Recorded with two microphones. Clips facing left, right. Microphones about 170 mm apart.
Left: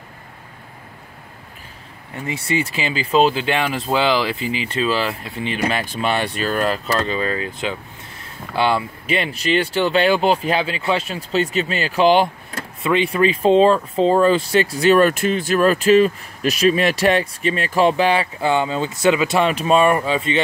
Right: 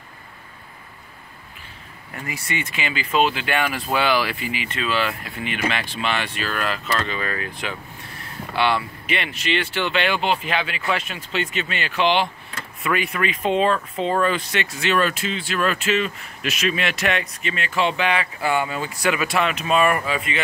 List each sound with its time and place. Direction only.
2.2 s speech: 30° left (ahead or behind)
12.8 s speech: 25° left (ahead or behind)